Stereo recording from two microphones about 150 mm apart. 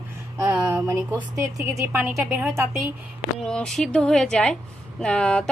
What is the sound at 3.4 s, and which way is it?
Speech, 5° left (ahead or behind).